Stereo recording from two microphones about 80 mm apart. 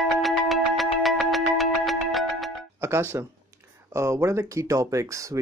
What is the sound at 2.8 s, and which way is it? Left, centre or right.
Speech, right.